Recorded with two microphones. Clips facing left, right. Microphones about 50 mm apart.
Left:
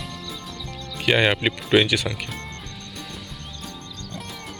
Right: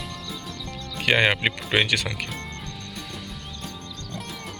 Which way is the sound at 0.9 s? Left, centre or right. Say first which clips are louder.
Left 1 dB; right.